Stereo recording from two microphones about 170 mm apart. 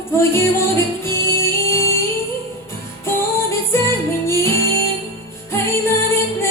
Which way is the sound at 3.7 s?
15° left (ahead or behind).